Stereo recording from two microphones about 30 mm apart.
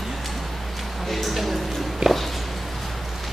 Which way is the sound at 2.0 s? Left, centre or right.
Right.